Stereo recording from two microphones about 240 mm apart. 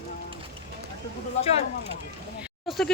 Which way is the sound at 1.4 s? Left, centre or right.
Left.